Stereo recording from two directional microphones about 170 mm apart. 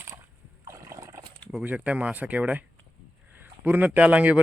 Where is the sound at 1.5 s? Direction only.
5° right (ahead or behind).